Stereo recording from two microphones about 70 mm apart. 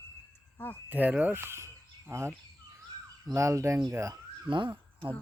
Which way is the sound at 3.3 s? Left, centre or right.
Right.